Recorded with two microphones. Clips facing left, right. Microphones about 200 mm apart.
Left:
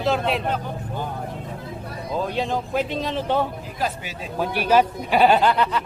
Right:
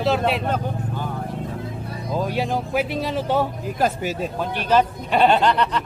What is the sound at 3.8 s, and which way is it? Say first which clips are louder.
Speech: right 6 dB; 45° right (ahead or behind).